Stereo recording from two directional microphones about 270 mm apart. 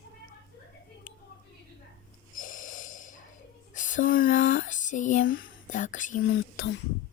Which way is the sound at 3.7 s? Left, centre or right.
Left.